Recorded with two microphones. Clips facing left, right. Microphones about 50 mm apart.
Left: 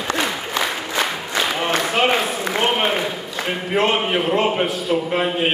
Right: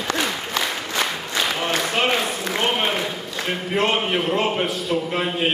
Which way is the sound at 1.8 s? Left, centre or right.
Centre.